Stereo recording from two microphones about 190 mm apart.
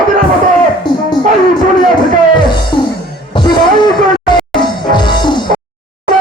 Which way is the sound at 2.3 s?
25° left (ahead or behind).